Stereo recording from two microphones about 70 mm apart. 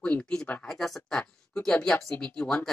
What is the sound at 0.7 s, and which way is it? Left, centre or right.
Speech, centre.